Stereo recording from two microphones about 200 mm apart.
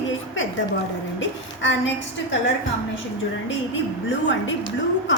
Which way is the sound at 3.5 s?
70° left (ahead or behind).